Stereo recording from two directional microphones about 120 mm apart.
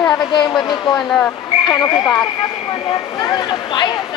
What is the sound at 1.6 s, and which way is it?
Speech, 30° left (ahead or behind).